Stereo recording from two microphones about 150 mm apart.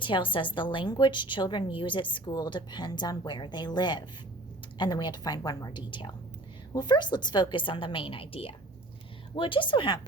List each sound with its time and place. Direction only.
0.0 s a woman's voice: 35° left (ahead or behind)